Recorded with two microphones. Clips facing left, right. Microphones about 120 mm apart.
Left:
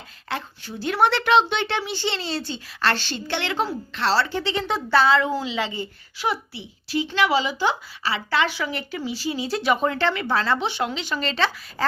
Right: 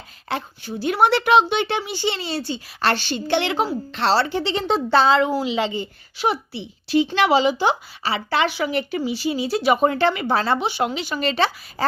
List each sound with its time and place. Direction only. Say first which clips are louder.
0.3 s a woman's voice: right 3 dB; 15° right (ahead or behind)